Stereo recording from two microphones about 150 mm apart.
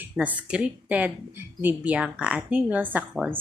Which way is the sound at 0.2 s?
10° right (ahead or behind).